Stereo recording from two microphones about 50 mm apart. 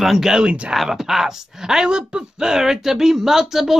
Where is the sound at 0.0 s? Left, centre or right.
Centre.